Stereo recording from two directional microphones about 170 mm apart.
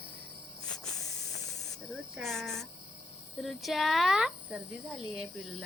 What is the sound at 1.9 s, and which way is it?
Speech, centre (ahead or behind).